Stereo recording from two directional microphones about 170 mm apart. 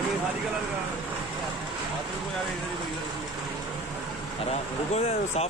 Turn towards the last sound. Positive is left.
turn(degrees=40)  # may be behind; listen again after turning